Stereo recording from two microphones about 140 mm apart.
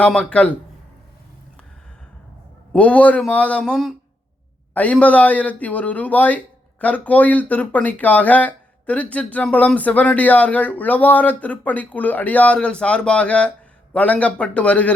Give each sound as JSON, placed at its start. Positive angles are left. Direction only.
{"t": 0.0, "sound": "speech", "side_deg": 5}
{"t": 2.7, "sound": "speech", "side_deg": 10}